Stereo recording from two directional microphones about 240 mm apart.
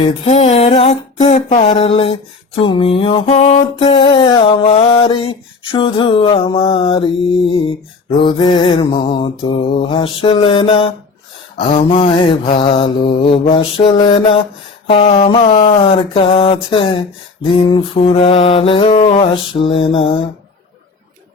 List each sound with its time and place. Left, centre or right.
0.0 s mantra: left